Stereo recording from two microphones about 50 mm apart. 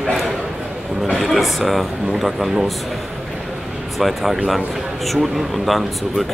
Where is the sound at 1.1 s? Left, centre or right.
Centre.